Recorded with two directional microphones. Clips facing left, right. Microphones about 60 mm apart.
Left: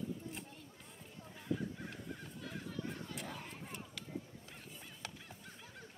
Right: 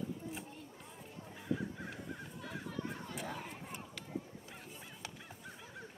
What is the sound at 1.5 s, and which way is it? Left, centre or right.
Crow, centre.